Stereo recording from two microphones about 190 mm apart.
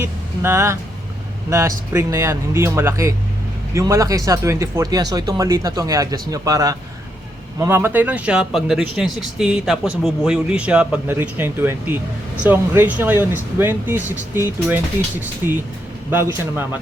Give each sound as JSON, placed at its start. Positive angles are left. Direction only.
{"t": 0.0, "sound": "speech", "side_deg": -15}
{"t": 16.0, "sound": "speech", "side_deg": -10}